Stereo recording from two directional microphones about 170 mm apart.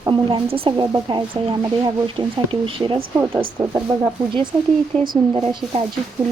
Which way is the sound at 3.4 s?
25° right (ahead or behind).